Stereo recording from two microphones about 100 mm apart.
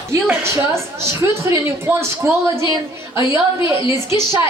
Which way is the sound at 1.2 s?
25° right (ahead or behind).